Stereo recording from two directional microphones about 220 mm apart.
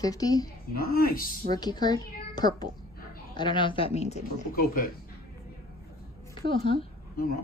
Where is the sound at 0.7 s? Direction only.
45° left (ahead or behind).